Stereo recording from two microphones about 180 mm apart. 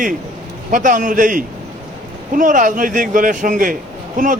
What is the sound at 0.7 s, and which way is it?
A man's voice, 45° right (ahead or behind).